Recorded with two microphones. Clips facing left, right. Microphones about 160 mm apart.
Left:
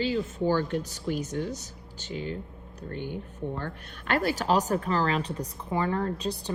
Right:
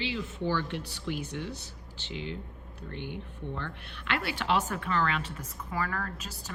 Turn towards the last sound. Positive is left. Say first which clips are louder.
# left 11 dB
turn(degrees=30)  # may be behind; listen again after turning